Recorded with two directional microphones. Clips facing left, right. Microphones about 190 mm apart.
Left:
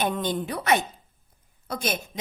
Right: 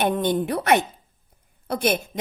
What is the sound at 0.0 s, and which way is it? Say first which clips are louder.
A woman's voice: right 5 dB; 55° right (ahead or behind).